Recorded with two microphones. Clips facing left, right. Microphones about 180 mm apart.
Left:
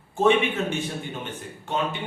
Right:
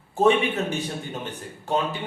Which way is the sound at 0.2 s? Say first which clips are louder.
Right 1 dB; 35° right (ahead or behind).